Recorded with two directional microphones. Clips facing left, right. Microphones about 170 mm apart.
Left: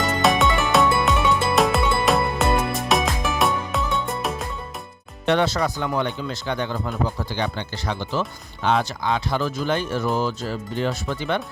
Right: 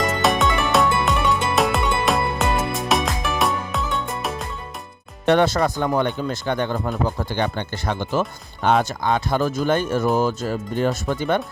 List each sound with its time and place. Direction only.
0.0 s music: centre (ahead or behind)
5.2 s speech: 50° right (ahead or behind)